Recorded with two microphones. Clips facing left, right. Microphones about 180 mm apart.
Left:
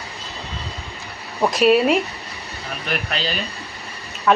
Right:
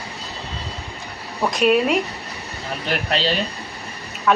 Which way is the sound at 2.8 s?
30° right (ahead or behind).